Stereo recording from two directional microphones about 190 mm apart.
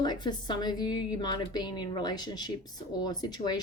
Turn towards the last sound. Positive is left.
turn(degrees=20)  # may be behind; listen again after turning